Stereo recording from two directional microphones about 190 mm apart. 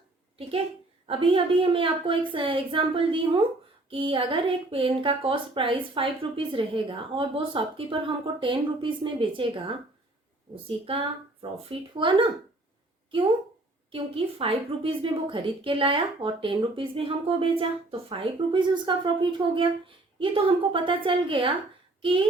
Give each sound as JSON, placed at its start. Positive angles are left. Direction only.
{"t": 1.0, "sound": "a woman's voice", "side_deg": -30}